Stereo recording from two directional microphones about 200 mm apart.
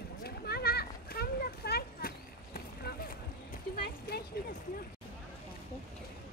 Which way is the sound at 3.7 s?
50° left (ahead or behind).